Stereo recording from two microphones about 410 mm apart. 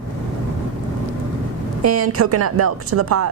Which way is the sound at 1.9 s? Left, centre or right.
Right.